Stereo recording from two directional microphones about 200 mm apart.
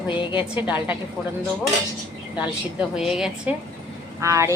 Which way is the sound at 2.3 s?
5° right (ahead or behind).